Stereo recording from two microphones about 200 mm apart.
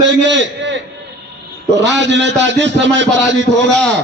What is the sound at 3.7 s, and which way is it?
Speech, 5° left (ahead or behind).